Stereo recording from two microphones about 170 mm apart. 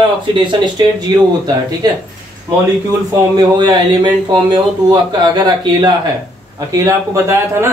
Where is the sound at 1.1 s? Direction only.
25° right (ahead or behind).